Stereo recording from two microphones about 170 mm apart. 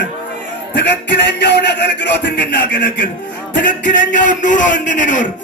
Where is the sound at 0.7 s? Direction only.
90° left.